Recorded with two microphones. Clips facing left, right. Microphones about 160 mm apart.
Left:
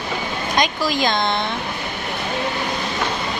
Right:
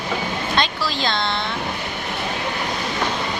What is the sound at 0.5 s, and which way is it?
Speech, 15° left (ahead or behind).